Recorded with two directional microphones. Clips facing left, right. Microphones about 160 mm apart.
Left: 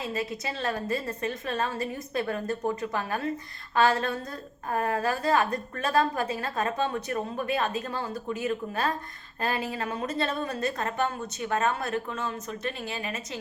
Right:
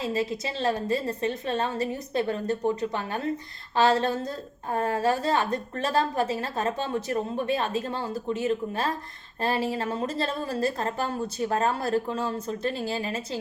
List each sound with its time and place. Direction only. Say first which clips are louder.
0.0 s a woman's voice: right 4 dB; 25° right (ahead or behind)